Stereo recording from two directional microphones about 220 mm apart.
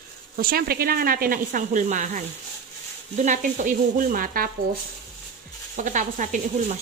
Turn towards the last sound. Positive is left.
turn(degrees=-35)  # may be behind; listen again after turning